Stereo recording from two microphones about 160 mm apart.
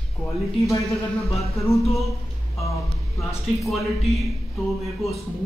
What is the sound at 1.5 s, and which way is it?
Speech, centre (ahead or behind).